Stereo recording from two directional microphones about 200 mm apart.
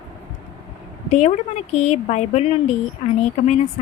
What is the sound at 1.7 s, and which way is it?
Speech, 35° left (ahead or behind).